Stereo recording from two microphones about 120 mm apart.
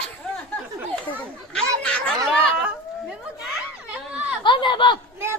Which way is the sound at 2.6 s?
5° right (ahead or behind).